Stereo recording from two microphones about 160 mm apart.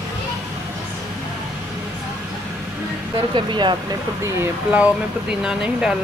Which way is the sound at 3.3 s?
30° right (ahead or behind).